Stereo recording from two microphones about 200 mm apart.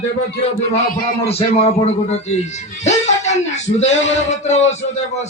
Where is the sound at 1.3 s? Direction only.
30° left (ahead or behind).